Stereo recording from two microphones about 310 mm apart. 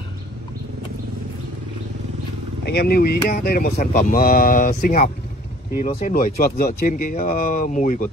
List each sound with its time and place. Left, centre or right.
2.6 s speech: left